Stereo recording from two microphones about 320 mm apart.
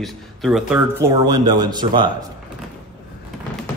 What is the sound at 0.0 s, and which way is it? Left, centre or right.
Speech, centre.